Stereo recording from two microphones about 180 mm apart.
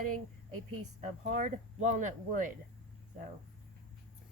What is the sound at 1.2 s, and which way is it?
Speech, 45° right (ahead or behind).